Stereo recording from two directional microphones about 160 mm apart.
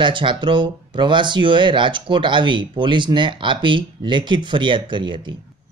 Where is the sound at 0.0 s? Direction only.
30° right (ahead or behind).